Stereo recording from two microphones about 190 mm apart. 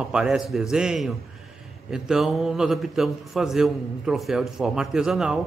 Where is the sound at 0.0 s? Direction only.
5° right (ahead or behind).